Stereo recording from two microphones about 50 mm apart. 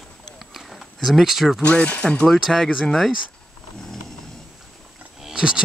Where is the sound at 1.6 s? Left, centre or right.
Left.